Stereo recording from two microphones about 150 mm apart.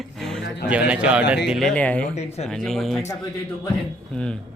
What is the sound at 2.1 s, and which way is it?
Speech, 45° left (ahead or behind).